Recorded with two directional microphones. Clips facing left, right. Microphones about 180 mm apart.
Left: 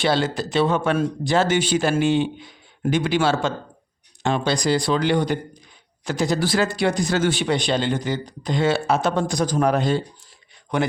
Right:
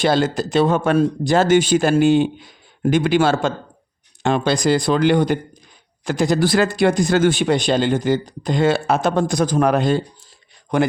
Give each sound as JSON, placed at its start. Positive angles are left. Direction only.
{"t": 0.0, "sound": "speech", "side_deg": -45}
{"t": 10.7, "sound": "speech", "side_deg": -45}